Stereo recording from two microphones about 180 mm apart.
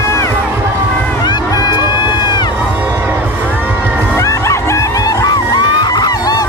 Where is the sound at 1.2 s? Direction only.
25° left (ahead or behind).